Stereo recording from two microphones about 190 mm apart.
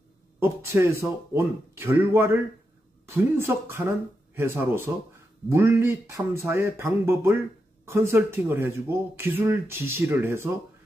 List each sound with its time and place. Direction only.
0.4 s speech: 15° right (ahead or behind)